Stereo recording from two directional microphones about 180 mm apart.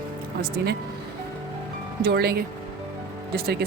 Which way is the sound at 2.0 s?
60° right (ahead or behind).